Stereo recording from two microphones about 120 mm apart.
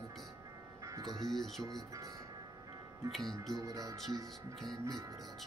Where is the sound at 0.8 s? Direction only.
30° right (ahead or behind).